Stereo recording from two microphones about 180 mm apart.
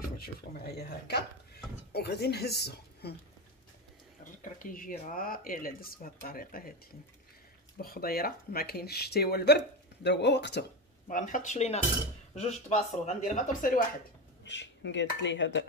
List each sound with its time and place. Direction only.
0.2 s speech: 60° left (ahead or behind)
4.2 s speech: 50° left (ahead or behind)
7.8 s speech: 55° left (ahead or behind)
11.1 s speech: 45° left (ahead or behind)
14.4 s speech: 80° left